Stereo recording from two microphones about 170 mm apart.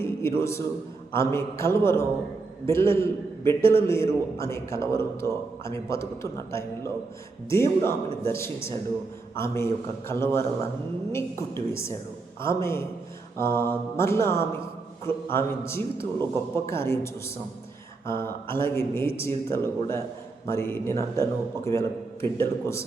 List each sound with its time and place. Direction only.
0.0 s a man's voice: 15° left (ahead or behind)